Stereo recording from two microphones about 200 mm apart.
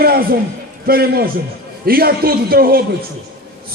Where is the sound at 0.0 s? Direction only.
50° right (ahead or behind).